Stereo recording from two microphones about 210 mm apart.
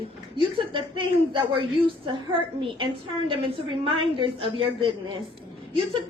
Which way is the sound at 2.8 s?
25° right (ahead or behind).